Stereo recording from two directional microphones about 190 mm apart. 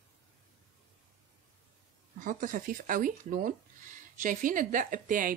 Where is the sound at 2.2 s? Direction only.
45° right (ahead or behind).